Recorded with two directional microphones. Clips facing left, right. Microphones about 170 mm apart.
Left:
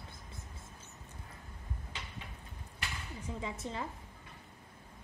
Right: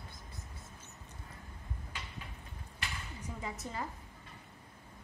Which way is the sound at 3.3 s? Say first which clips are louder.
Left 1 dB; 25° left (ahead or behind).